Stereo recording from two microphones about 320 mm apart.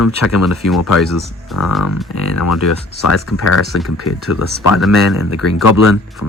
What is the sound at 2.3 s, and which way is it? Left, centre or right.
Speech, left.